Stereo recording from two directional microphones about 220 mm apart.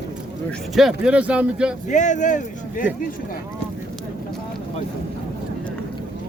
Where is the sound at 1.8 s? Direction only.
35° left (ahead or behind).